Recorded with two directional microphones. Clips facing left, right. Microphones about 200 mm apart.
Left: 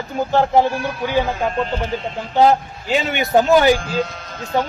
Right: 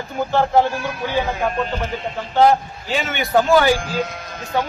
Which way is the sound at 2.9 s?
20° left (ahead or behind).